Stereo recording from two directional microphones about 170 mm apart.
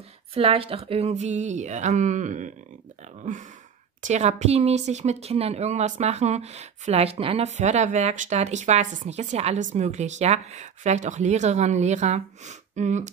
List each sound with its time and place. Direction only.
0.3 s speech: 35° right (ahead or behind)